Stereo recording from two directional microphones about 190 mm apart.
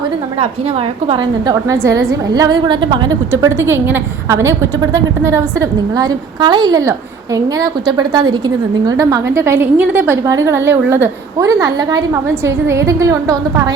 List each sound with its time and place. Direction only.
0.3 s a woman's voice: 35° right (ahead or behind)
3.4 s a woman's voice: 15° right (ahead or behind)